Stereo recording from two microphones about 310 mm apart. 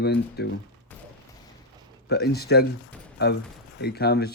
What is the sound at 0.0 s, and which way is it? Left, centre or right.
Speech, left.